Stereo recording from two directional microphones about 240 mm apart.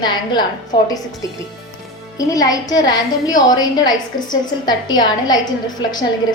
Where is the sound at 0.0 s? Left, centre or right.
Centre.